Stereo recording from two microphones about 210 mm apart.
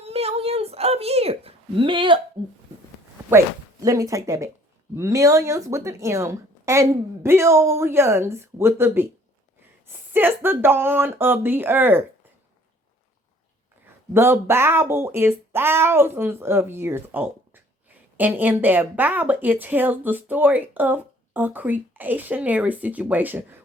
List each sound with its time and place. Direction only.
0.0 s a sound: 30° right (ahead or behind)
3.2 s a woman's voice: 15° right (ahead or behind)
10.1 s a woman's voice: 10° right (ahead or behind)
14.1 s a woman's voice: 10° right (ahead or behind)